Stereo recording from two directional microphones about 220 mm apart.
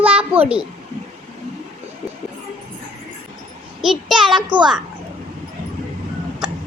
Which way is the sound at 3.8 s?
Centre (ahead or behind).